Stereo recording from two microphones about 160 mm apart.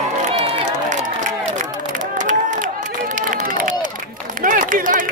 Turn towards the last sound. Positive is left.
turn(degrees=-60)  # may be behind; listen again after turning